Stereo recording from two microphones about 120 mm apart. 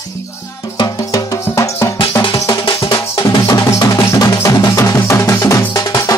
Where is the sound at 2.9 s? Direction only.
30° left (ahead or behind).